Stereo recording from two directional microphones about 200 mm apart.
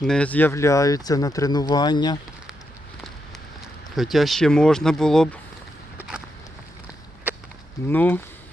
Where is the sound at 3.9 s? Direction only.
Centre (ahead or behind).